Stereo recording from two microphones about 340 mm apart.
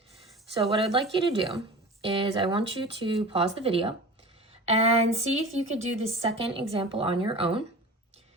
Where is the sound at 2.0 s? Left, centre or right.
Centre.